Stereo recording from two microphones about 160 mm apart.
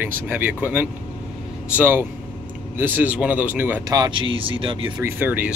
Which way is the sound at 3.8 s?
25° right (ahead or behind).